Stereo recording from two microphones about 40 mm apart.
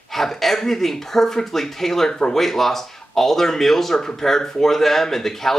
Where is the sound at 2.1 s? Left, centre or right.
Centre.